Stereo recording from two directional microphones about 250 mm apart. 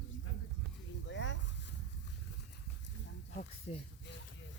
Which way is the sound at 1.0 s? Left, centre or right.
Left.